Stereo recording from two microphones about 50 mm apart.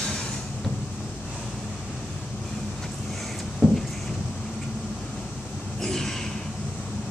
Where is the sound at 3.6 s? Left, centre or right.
Left.